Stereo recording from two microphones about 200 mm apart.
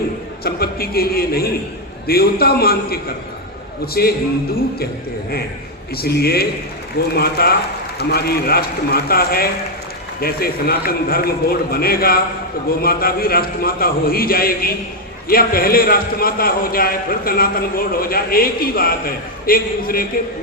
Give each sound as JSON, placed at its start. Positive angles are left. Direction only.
{"t": 0.4, "sound": "a man's voice", "side_deg": 50}
{"t": 6.0, "sound": "a man's voice", "side_deg": 50}